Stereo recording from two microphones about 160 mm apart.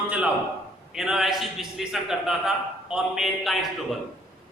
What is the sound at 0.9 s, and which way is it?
A man's voice, centre (ahead or behind).